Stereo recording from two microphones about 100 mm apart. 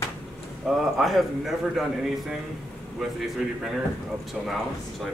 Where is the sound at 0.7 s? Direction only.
Centre (ahead or behind).